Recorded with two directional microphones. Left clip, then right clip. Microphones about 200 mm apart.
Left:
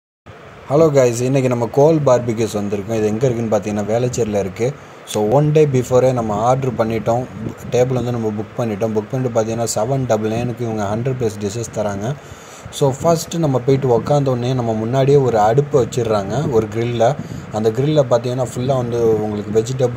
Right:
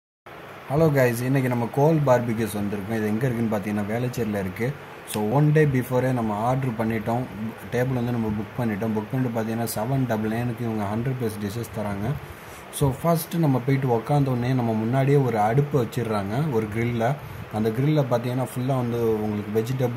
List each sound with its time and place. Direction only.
0.7 s speech: 30° left (ahead or behind)